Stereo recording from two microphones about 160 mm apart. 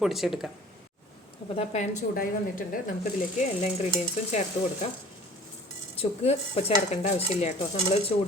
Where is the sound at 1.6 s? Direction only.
45° left (ahead or behind).